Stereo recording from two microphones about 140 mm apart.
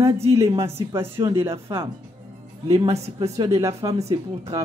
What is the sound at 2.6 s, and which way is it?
Speech, 25° right (ahead or behind).